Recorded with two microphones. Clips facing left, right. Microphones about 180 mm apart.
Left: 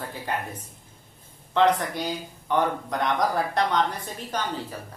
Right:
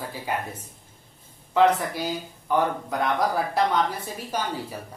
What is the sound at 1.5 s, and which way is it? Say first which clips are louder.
A woman's voice: right 1 dB; 5° right (ahead or behind).